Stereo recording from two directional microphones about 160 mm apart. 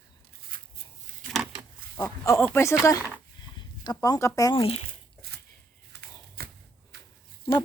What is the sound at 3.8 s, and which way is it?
Speech, 25° left (ahead or behind).